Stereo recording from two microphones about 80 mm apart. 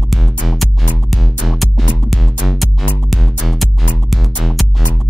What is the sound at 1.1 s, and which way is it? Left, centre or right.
Music, centre.